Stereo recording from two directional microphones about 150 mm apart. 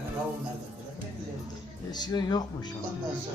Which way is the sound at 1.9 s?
25° left (ahead or behind).